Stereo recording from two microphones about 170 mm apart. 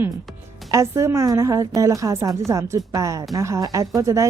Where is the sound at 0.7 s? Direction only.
15° right (ahead or behind).